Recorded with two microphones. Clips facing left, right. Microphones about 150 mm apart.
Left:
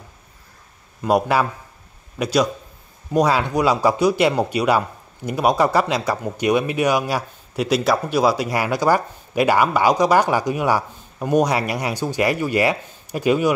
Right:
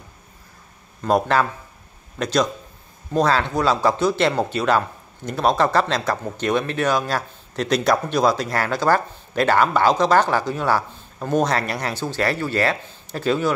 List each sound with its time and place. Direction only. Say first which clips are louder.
1.0 s speech: left 1 dB; 10° left (ahead or behind)